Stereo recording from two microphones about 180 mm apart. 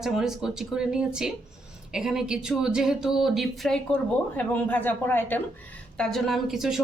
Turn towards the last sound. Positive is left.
turn(degrees=0)  # may be behind; listen again after turning